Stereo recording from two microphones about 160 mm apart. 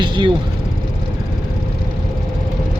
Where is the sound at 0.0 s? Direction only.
30° right (ahead or behind).